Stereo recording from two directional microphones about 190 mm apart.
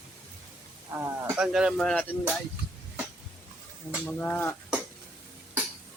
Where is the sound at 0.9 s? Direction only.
10° right (ahead or behind).